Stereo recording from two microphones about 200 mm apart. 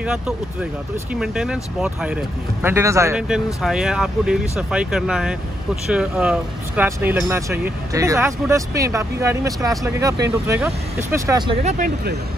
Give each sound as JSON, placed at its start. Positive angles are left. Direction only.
{"t": 0.0, "sound": "speech", "side_deg": -5}
{"t": 3.6, "sound": "speech", "side_deg": -5}
{"t": 11.6, "sound": "speech", "side_deg": -50}